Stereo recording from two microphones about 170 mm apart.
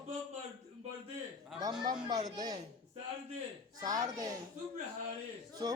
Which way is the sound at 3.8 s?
20° right (ahead or behind).